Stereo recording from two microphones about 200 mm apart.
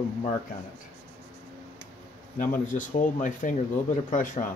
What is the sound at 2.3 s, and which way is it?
Speech, 40° left (ahead or behind).